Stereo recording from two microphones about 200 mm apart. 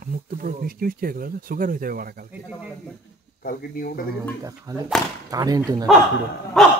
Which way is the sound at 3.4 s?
45° left (ahead or behind).